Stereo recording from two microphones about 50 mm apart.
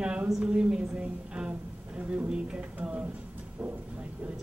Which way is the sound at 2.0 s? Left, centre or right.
Right.